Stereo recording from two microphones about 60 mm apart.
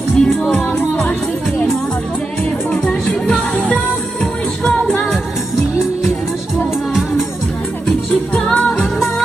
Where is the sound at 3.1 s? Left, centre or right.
Centre.